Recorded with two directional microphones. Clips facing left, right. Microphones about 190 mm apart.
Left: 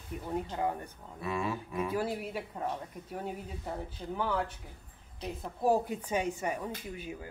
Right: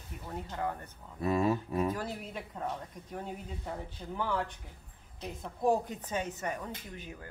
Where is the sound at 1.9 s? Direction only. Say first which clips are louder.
Left 4 dB; 10° left (ahead or behind).